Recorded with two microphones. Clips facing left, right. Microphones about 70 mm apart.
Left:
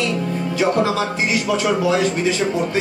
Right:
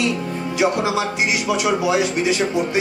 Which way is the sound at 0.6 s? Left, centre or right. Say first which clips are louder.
Left 1 dB; centre.